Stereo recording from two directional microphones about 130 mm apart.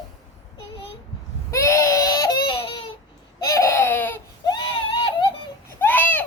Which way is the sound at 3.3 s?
25° left (ahead or behind).